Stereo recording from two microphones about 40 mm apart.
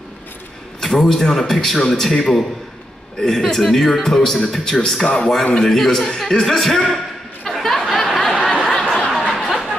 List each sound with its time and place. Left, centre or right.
0.7 s a man's voice: centre
5.0 s a man's voice: left
5.5 s speech: centre
7.4 s a sound: centre